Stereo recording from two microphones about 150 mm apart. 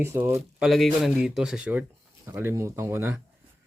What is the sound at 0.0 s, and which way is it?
Speech, 15° right (ahead or behind).